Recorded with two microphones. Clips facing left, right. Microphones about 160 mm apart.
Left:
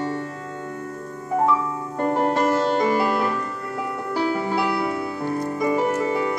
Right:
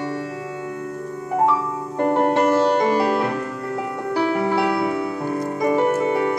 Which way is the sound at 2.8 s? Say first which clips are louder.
Right 2 dB; 25° right (ahead or behind).